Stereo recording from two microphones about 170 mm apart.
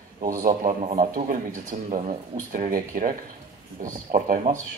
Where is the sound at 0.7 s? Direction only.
45° right (ahead or behind).